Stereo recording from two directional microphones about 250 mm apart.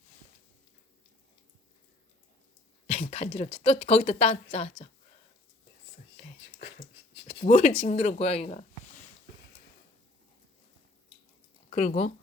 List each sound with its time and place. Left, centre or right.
2.8 s speech: left
7.3 s a sound: left
7.9 s speech: left
11.7 s speech: left